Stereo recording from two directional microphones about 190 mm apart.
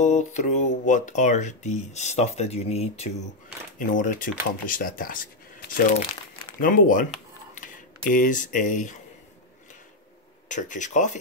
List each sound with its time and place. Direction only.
0.0 s speech: 40° left (ahead or behind)
3.7 s speech: 45° left (ahead or behind)
10.5 s speech: 40° left (ahead or behind)